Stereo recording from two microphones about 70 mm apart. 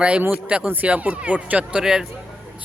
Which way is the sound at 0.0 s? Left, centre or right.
Centre.